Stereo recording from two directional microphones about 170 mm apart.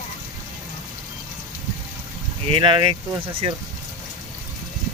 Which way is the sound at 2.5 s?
30° right (ahead or behind).